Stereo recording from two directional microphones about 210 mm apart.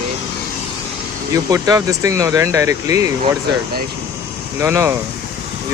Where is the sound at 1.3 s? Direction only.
15° right (ahead or behind).